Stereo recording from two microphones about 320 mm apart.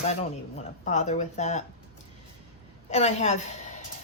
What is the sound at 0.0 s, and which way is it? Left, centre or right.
Speech, centre.